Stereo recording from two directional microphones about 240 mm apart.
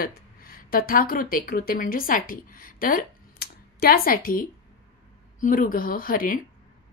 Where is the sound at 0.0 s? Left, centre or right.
Left.